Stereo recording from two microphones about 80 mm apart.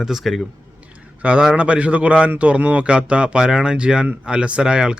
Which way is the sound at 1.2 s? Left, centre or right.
Centre.